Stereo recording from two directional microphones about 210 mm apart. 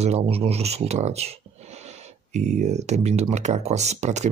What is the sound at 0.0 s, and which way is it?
Speech, 30° right (ahead or behind).